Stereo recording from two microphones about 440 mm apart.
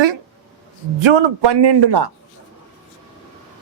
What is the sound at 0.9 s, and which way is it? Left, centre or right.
A man's voice, right.